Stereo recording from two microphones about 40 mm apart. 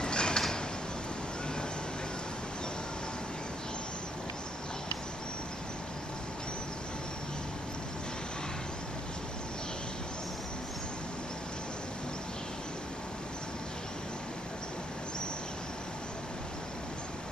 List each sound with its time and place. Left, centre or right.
0.0 s pulleys: left